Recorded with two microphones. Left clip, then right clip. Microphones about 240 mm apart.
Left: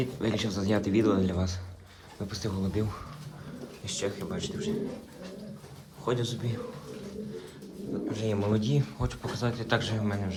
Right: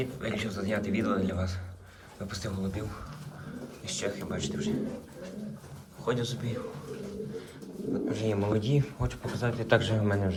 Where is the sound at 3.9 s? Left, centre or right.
Left.